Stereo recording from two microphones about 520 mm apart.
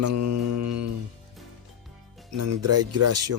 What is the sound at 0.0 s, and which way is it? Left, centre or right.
Mantra, right.